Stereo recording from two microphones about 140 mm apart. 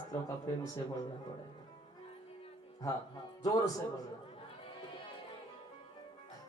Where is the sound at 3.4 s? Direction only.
25° left (ahead or behind).